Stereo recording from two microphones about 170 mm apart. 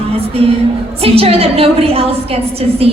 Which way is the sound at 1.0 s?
35° right (ahead or behind).